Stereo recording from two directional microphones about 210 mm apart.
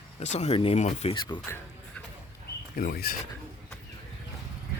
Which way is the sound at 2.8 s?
45° left (ahead or behind).